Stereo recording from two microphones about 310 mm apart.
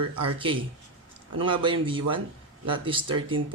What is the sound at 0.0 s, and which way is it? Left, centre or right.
Speech, right.